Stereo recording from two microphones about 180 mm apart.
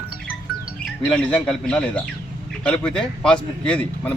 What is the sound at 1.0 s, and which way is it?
Speech, 5° left (ahead or behind).